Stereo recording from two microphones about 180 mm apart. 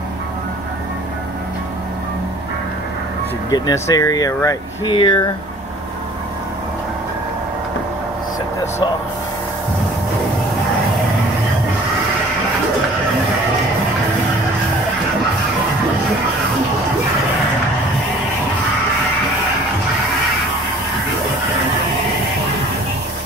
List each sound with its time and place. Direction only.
3.4 s speech: 20° left (ahead or behind)